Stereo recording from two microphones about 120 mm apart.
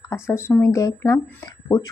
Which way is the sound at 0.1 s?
20° left (ahead or behind).